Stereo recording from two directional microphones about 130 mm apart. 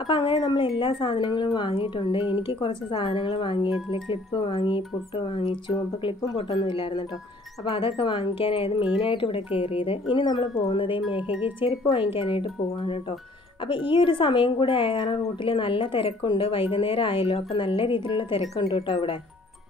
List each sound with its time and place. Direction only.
0.0 s speech: 40° left (ahead or behind)
6.6 s speech: 40° left (ahead or behind)